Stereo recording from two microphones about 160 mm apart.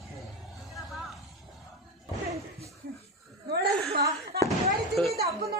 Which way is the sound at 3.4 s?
90° right.